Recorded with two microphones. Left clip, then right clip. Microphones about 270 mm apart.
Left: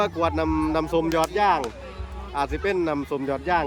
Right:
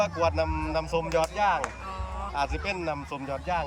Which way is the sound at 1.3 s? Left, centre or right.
Left.